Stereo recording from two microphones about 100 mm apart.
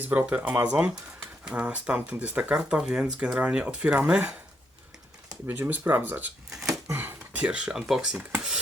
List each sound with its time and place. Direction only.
0.0 s speech: 15° right (ahead or behind)
5.5 s speech: 20° right (ahead or behind)
6.7 s a sound: 25° right (ahead or behind)
7.3 s speech: 10° right (ahead or behind)